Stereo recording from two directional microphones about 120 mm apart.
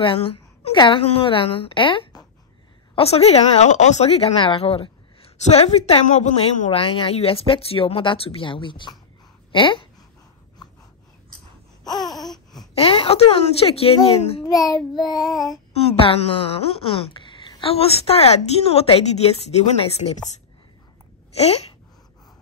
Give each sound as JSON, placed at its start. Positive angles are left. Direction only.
{"t": 0.0, "sound": "a woman's voice", "side_deg": 50}
{"t": 3.0, "sound": "a woman's voice", "side_deg": 60}
{"t": 6.0, "sound": "speech", "side_deg": 75}
{"t": 11.8, "sound": "a sound", "side_deg": 35}
{"t": 12.1, "sound": "a sound", "side_deg": 0}
{"t": 12.7, "sound": "a woman's voice", "side_deg": 55}
{"t": 14.4, "sound": "child singing", "side_deg": 30}
{"t": 15.7, "sound": "a woman's voice", "side_deg": 55}
{"t": 21.4, "sound": "a woman's voice", "side_deg": 60}